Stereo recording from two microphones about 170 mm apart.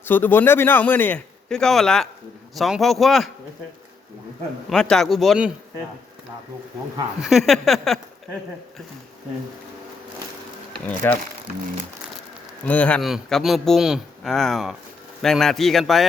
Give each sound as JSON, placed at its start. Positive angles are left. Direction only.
{"t": 0.0, "sound": "a man's voice", "side_deg": 10}
{"t": 4.7, "sound": "speech", "side_deg": 5}
{"t": 7.2, "sound": "speech", "side_deg": 0}
{"t": 10.7, "sound": "speech", "side_deg": 10}
{"t": 12.6, "sound": "speech", "side_deg": 10}